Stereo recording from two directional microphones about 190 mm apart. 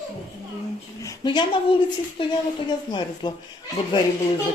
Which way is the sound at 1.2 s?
25° left (ahead or behind).